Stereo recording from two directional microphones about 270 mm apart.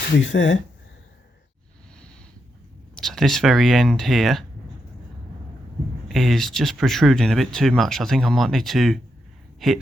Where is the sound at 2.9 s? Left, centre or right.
Centre.